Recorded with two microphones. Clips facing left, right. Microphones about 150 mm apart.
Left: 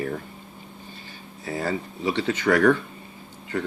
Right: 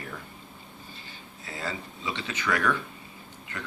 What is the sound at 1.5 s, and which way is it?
Speech, 55° left (ahead or behind).